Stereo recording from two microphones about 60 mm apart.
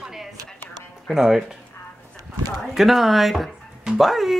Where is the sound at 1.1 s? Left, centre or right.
Centre.